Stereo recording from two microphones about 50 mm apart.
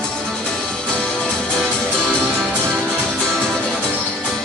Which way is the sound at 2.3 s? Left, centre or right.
Centre.